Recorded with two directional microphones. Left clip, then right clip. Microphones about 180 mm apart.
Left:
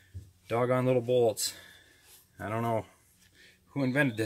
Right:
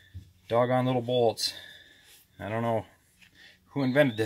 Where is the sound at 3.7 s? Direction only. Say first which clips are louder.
Right 4 dB; 35° right (ahead or behind).